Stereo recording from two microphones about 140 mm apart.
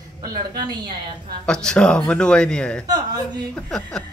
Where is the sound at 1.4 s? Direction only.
5° left (ahead or behind).